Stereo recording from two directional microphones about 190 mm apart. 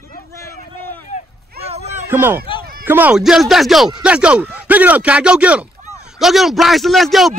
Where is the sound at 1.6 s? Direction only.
35° right (ahead or behind).